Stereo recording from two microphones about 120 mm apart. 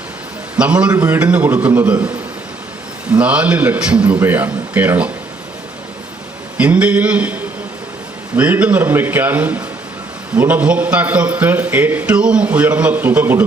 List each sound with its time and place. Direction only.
0.5 s a man's voice: 10° right (ahead or behind)
3.1 s a man's voice: 10° right (ahead or behind)
6.6 s a man's voice: 10° right (ahead or behind)
8.4 s a man's voice: 15° right (ahead or behind)